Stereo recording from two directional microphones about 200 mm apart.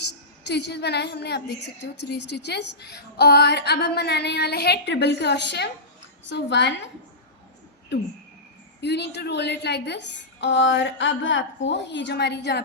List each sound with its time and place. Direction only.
0.0 s a woman's voice: 60° left (ahead or behind)
8.8 s a woman's voice: 55° left (ahead or behind)